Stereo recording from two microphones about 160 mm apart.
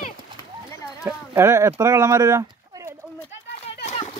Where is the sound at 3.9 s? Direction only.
35° left (ahead or behind).